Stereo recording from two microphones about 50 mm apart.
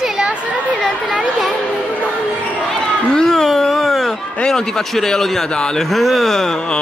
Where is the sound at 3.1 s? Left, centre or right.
Centre.